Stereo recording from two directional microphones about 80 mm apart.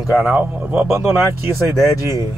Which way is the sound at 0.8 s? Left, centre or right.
Right.